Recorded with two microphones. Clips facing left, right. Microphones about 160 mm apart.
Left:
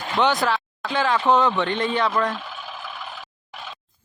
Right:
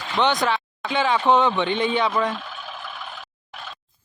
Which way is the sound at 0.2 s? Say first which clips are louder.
Even; 5° left (ahead or behind).